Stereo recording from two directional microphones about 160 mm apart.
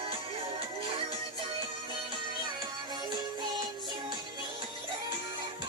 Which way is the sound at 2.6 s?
25° right (ahead or behind).